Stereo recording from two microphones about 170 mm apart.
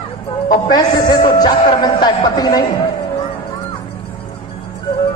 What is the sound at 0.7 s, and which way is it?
A man's voice, 25° left (ahead or behind).